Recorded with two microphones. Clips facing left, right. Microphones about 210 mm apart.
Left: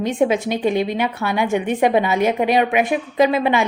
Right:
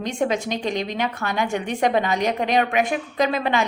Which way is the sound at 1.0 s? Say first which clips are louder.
Left 4 dB; 15° left (ahead or behind).